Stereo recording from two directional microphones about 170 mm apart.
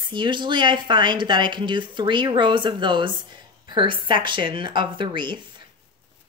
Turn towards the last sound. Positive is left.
turn(degrees=-25)  # may be behind; listen again after turning